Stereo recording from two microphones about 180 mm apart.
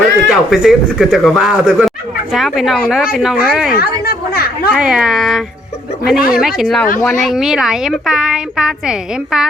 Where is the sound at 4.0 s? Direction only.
60° left (ahead or behind).